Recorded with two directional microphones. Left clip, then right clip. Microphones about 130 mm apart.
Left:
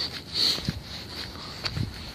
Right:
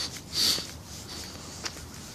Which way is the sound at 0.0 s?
35° right (ahead or behind).